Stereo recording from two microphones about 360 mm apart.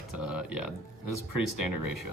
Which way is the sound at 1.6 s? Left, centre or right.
Left.